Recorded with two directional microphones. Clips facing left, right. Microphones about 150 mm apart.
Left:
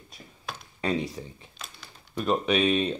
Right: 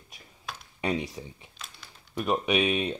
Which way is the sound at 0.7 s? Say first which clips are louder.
Left 1 dB; 15° right (ahead or behind).